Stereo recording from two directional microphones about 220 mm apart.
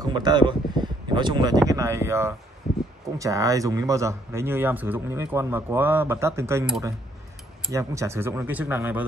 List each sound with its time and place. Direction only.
0.0 s speech: 20° right (ahead or behind)